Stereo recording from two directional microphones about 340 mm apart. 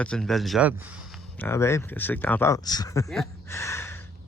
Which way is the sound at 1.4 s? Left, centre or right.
Centre.